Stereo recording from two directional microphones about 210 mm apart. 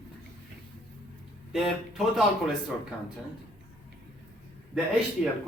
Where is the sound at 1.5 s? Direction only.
Centre (ahead or behind).